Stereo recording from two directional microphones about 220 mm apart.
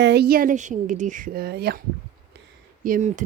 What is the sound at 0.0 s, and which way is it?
A woman's voice, 50° right (ahead or behind).